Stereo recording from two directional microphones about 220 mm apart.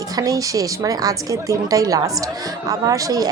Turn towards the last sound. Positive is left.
turn(degrees=-15)  # may be behind; listen again after turning